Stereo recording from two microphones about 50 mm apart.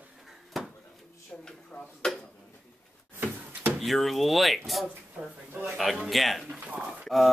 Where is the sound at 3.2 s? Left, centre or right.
Right.